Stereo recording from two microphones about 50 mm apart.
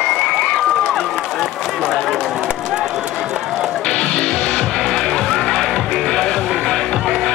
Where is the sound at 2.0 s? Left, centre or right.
Centre.